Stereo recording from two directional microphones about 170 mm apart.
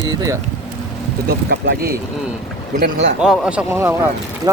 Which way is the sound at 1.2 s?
80° right.